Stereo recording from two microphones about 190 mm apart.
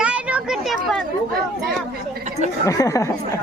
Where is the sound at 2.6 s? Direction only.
15° left (ahead or behind).